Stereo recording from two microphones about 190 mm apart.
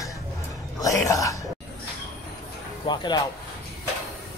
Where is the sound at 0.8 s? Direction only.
15° left (ahead or behind).